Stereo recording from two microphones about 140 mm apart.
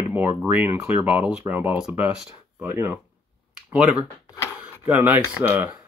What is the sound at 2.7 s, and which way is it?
Speech, 20° right (ahead or behind).